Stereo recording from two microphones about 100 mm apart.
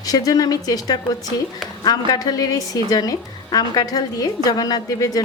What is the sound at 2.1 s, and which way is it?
A woman's voice, 40° left (ahead or behind).